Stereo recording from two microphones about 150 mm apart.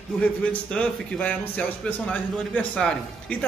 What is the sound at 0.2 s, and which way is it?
A man's voice, 10° left (ahead or behind).